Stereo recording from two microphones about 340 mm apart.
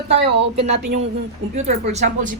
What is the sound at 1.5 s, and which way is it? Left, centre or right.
Speech, centre.